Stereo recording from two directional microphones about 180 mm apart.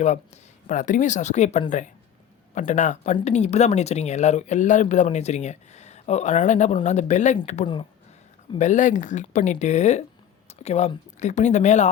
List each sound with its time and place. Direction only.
0.7 s speech: 45° left (ahead or behind)